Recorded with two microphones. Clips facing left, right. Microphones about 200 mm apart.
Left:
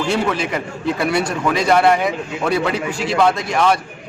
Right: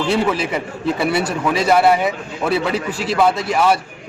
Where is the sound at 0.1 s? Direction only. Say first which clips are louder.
Right 2 dB; 5° right (ahead or behind).